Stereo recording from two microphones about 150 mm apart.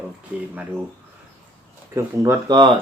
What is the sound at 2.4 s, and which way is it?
Speech, 30° right (ahead or behind).